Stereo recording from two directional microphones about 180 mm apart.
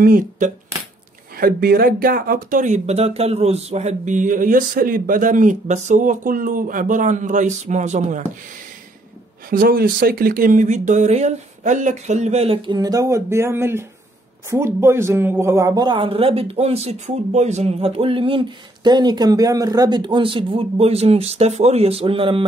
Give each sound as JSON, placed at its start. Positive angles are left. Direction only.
{"t": 0.0, "sound": "speech", "side_deg": -50}
{"t": 9.5, "sound": "speech", "side_deg": -55}